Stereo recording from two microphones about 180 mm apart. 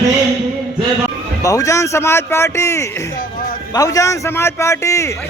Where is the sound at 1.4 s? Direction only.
20° left (ahead or behind).